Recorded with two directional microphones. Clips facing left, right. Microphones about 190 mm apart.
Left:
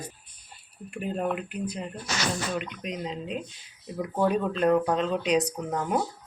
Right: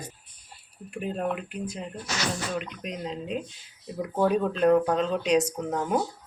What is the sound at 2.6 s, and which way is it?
Speech, centre (ahead or behind).